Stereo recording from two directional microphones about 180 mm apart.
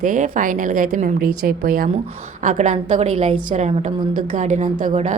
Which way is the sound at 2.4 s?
40° right (ahead or behind).